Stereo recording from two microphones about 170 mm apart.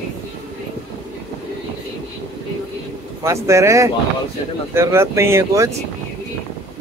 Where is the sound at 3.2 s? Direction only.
15° right (ahead or behind).